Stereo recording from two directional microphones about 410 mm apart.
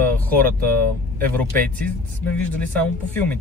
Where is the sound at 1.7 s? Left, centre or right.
Centre.